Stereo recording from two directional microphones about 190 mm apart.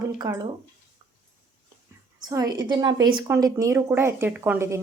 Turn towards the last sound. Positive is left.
turn(degrees=-10)  # may be behind; listen again after turning